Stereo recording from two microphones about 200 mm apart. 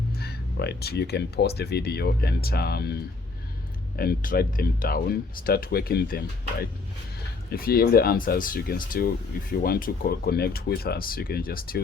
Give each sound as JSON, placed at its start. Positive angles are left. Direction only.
{"t": 0.2, "sound": "speech", "side_deg": 50}
{"t": 3.9, "sound": "speech", "side_deg": 50}